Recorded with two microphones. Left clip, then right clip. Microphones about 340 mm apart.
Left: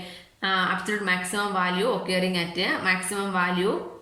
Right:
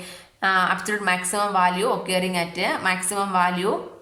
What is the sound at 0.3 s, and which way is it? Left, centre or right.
A woman's voice, centre.